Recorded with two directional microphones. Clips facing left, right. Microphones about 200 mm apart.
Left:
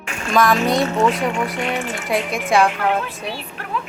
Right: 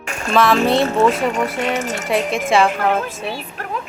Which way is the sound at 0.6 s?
30° right (ahead or behind).